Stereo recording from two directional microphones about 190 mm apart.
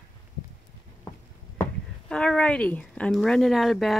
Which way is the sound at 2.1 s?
5° left (ahead or behind).